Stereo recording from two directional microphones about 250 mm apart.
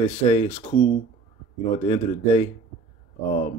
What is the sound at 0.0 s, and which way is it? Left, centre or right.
Speech, left.